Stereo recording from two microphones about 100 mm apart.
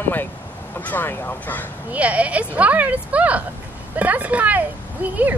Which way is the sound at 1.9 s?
15° right (ahead or behind).